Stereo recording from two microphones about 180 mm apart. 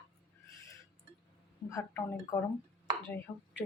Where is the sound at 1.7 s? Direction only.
15° left (ahead or behind).